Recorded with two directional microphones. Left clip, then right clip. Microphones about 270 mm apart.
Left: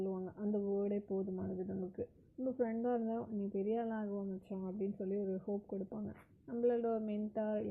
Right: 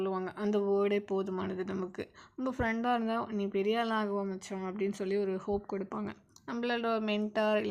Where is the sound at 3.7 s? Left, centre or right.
Centre.